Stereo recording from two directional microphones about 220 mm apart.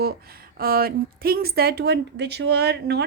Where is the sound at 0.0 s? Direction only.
45° right (ahead or behind).